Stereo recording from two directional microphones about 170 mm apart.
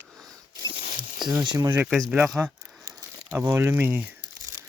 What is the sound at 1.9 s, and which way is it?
Speech, 5° right (ahead or behind).